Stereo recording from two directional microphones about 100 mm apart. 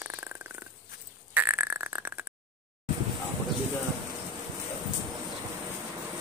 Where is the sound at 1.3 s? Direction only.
20° right (ahead or behind).